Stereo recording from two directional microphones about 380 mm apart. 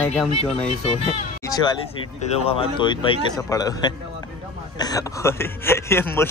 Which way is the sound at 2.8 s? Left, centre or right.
Centre.